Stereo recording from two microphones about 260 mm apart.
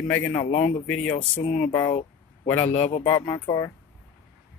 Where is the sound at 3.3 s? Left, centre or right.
Centre.